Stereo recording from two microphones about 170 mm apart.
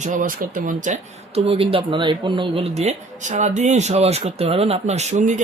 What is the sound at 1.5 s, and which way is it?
Speech, 35° right (ahead or behind).